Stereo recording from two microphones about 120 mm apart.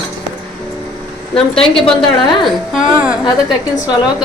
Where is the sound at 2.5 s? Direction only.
5° right (ahead or behind).